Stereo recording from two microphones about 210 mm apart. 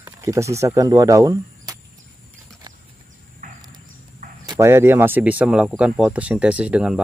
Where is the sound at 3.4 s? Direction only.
40° right (ahead or behind).